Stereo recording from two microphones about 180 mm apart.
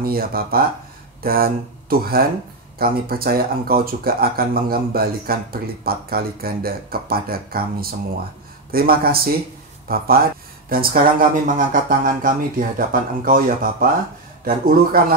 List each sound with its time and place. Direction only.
0.0 s speech: 55° right (ahead or behind)